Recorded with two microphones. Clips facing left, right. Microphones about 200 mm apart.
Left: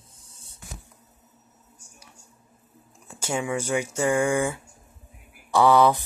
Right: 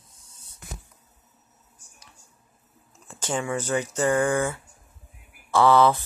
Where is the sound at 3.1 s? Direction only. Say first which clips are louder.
Even; 10° left (ahead or behind).